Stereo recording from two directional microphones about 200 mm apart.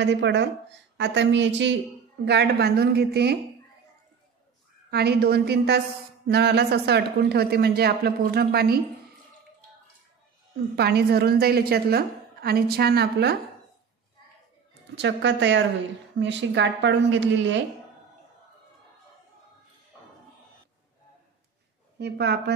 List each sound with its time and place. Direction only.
0.0 s a woman's voice: 60° right (ahead or behind)
4.9 s a woman's voice: 55° right (ahead or behind)
10.8 s a woman's voice: 55° right (ahead or behind)
14.7 s a woman's voice: 60° right (ahead or behind)
21.9 s a woman's voice: 60° right (ahead or behind)